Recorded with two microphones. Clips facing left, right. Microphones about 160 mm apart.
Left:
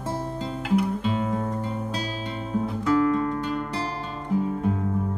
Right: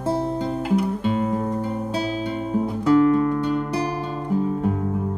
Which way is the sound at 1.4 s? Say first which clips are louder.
Right 4 dB; 15° right (ahead or behind).